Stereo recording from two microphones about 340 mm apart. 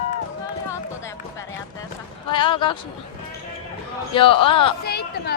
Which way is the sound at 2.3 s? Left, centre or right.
Centre.